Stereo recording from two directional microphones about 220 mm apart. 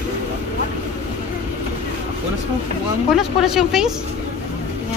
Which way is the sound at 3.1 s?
Centre (ahead or behind).